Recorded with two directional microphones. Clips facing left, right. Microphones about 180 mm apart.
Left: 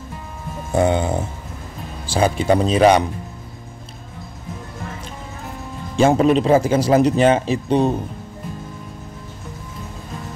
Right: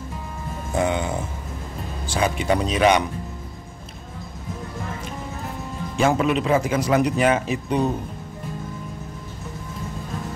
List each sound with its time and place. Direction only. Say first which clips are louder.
0.7 s speech: left 5 dB; 35° left (ahead or behind)
5.9 s speech: left 6 dB; 30° left (ahead or behind)